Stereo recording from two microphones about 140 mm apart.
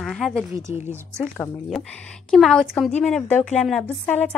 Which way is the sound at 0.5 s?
20° right (ahead or behind).